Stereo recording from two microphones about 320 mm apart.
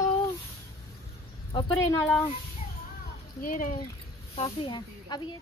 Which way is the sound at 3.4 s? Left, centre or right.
Left.